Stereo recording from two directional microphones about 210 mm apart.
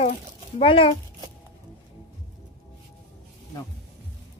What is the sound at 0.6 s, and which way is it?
Speech, 25° left (ahead or behind).